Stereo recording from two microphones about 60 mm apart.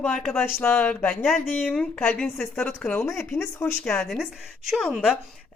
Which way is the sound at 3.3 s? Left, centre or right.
Left.